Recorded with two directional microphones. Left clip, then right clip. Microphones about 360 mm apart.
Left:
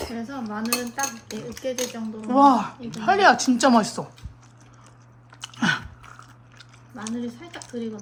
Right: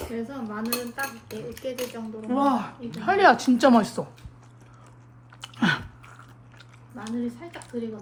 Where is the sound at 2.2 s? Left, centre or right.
Centre.